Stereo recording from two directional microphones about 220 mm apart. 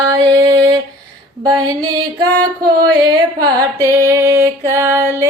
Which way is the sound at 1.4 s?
20° right (ahead or behind).